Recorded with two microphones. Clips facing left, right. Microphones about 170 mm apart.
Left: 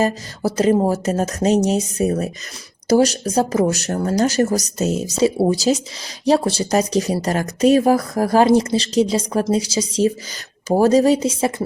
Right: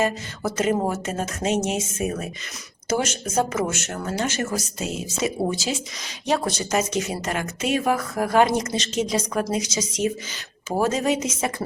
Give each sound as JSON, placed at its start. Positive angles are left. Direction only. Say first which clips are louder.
{"t": 0.0, "sound": "speech", "louder": "left 4 dB", "side_deg": 35}